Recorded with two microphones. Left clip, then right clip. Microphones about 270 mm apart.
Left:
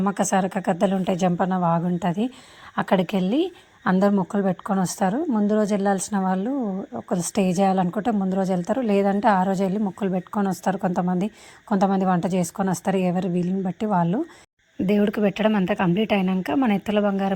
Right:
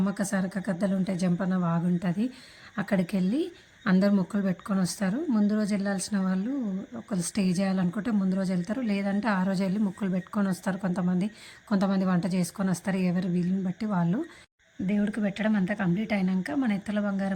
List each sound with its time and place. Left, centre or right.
0.2 s a woman's voice: centre
14.8 s a woman's voice: centre